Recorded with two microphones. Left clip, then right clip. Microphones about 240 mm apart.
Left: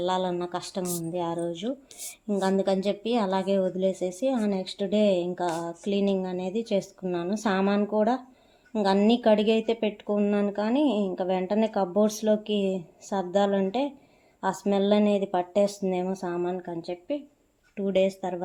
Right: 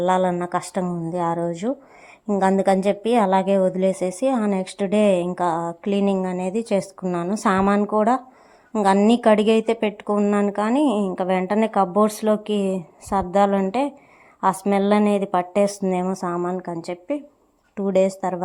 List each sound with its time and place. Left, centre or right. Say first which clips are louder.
0.0 s speech: right 7 dB; right